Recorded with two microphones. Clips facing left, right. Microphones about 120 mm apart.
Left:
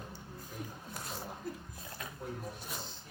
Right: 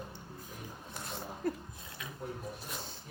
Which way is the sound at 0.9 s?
Centre (ahead or behind).